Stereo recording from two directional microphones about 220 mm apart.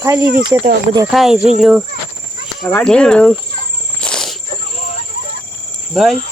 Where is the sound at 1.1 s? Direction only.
Centre (ahead or behind).